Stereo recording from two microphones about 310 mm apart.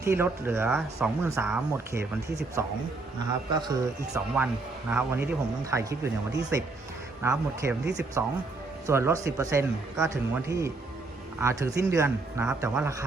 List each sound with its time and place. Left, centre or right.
0.0 s speech: centre